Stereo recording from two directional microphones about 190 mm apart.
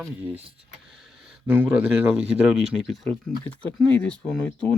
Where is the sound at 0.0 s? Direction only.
10° right (ahead or behind).